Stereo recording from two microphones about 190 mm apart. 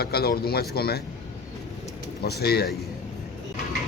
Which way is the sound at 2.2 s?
55° left (ahead or behind).